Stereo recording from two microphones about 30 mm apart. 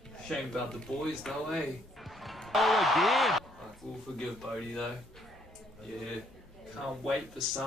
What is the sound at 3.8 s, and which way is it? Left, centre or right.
Speech, centre.